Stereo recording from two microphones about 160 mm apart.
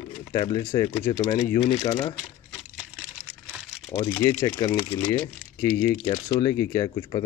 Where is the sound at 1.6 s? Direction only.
35° left (ahead or behind).